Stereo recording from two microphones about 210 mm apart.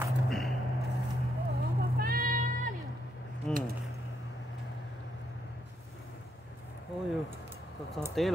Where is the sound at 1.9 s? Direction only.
45° right (ahead or behind).